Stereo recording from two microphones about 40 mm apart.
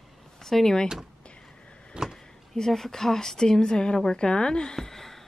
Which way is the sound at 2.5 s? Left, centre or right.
Centre.